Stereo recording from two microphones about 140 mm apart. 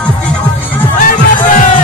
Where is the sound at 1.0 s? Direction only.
70° left (ahead or behind).